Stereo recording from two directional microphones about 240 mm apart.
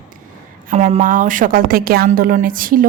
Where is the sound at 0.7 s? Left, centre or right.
Right.